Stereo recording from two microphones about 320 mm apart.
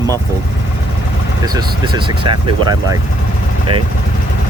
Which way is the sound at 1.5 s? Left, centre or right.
Centre.